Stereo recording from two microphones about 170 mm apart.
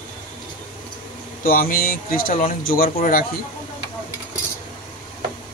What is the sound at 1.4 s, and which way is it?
Speech, 55° left (ahead or behind).